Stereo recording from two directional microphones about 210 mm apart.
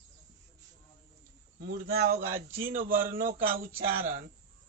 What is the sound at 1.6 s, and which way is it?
A man's voice, 45° right (ahead or behind).